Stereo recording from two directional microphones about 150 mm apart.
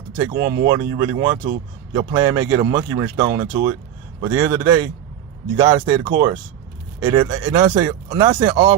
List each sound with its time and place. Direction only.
0.7 s speech: 20° right (ahead or behind)